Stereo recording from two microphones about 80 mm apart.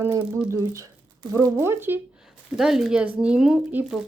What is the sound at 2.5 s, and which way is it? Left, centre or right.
Speech, centre.